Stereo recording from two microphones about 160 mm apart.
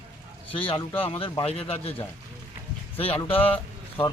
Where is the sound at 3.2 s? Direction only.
35° left (ahead or behind).